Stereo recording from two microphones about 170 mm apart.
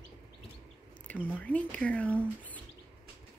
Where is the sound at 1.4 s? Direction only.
10° left (ahead or behind).